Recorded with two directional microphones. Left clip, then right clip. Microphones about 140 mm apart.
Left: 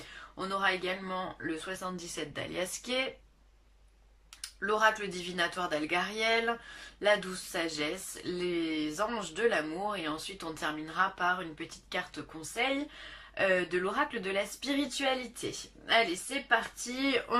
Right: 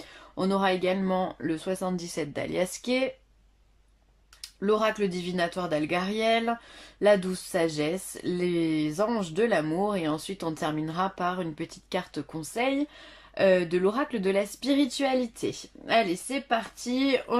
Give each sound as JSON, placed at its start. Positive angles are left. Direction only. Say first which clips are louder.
{"t": 0.3, "sound": "speech", "louder": "right 5 dB", "side_deg": -40}
{"t": 4.4, "sound": "speech", "louder": "right 4 dB", "side_deg": -35}